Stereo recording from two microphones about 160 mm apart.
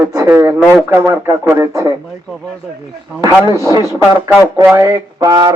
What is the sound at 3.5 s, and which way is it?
Speech, 20° right (ahead or behind).